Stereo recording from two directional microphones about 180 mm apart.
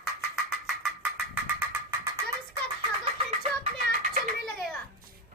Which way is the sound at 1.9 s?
15° right (ahead or behind).